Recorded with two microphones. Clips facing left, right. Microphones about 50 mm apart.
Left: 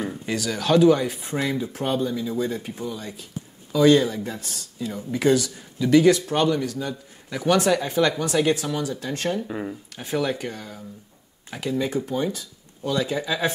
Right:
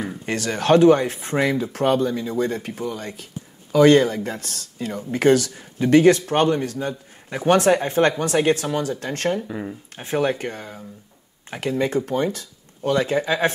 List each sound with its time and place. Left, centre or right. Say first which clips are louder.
0.3 s speech: right 4 dB; right
9.5 s speech: even; centre
9.9 s speech: right 4 dB; right